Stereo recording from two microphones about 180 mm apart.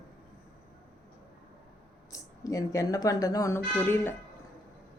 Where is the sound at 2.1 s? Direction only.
20° left (ahead or behind).